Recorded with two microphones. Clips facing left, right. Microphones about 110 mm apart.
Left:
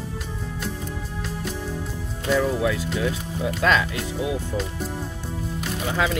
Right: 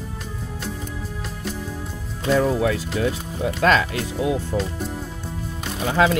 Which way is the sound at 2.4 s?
55° right (ahead or behind).